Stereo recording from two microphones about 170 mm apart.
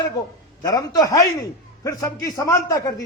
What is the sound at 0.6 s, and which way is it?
A man's voice, 25° left (ahead or behind).